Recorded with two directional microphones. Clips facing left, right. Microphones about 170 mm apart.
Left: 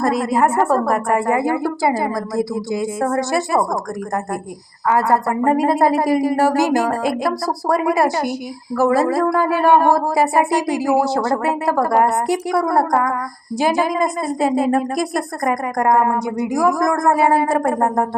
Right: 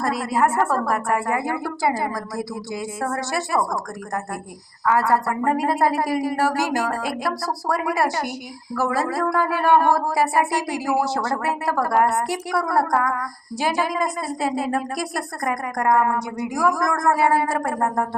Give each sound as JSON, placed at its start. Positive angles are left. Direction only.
{"t": 0.0, "sound": "a woman's voice", "side_deg": 20}
{"t": 4.9, "sound": "a woman's voice", "side_deg": 15}
{"t": 15.4, "sound": "a woman's voice", "side_deg": 35}
{"t": 16.2, "sound": "a woman's voice", "side_deg": 15}
{"t": 17.7, "sound": "a woman's voice", "side_deg": 30}